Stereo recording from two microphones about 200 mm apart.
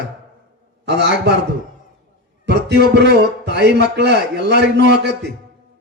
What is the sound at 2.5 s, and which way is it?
A man's voice, 55° right (ahead or behind).